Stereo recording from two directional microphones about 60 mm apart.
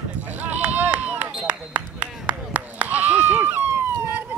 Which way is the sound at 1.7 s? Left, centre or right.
Right.